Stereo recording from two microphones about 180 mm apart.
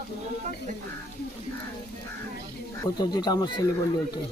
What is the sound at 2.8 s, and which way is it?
Speech, 25° left (ahead or behind).